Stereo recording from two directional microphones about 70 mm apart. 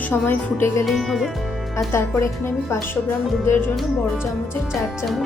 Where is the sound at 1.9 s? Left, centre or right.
Left.